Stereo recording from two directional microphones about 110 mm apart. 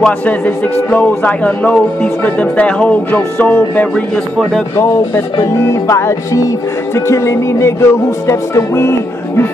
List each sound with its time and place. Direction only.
0.0 s speech: 15° left (ahead or behind)
4.4 s speech: centre (ahead or behind)
4.7 s music: 25° left (ahead or behind)